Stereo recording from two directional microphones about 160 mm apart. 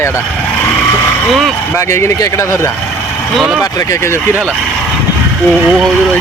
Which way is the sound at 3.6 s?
20° left (ahead or behind).